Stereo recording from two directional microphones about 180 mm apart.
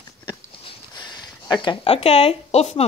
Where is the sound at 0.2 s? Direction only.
25° left (ahead or behind).